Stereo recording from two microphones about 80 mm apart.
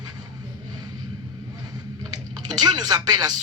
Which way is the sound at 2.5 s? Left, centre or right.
Right.